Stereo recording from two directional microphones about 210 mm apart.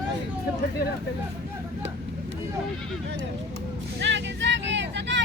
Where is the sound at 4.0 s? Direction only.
60° right (ahead or behind).